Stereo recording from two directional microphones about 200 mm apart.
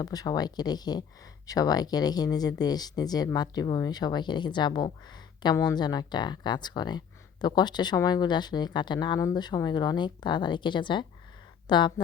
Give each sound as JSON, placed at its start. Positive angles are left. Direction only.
{"t": 0.0, "sound": "speech", "side_deg": 20}